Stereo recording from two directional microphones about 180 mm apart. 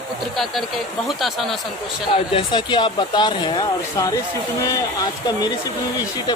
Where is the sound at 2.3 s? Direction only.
25° left (ahead or behind).